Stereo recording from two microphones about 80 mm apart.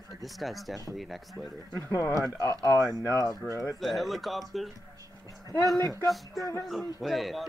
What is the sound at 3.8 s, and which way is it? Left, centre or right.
Speech, centre.